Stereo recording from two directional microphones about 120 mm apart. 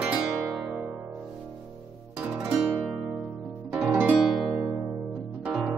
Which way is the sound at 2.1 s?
10° right (ahead or behind).